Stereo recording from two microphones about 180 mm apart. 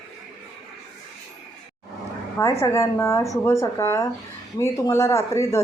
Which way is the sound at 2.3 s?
15° left (ahead or behind).